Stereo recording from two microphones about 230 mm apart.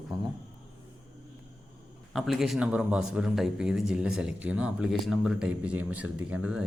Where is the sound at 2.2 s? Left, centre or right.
Centre.